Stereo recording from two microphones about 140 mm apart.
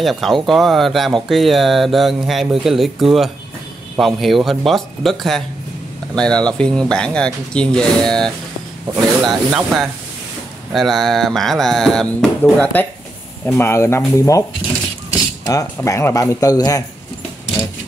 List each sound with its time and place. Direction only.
0.0 s speech: centre (ahead or behind); by 14.4 s 20° left (ahead or behind)
15.4 s speech: 25° left (ahead or behind)